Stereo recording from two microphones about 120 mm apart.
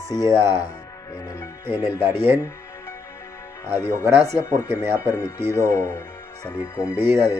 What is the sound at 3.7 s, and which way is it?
Speech, 35° left (ahead or behind).